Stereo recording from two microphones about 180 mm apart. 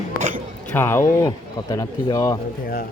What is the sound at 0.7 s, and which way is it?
Speech, 15° left (ahead or behind).